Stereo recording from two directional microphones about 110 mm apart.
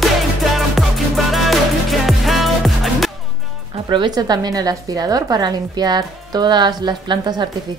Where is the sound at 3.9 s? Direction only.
40° right (ahead or behind).